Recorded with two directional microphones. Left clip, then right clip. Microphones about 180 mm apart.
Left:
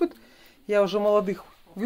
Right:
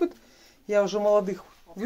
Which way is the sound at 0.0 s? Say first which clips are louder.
Left 1 dB; 25° left (ahead or behind).